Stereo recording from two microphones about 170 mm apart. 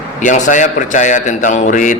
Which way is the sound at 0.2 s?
45° left (ahead or behind).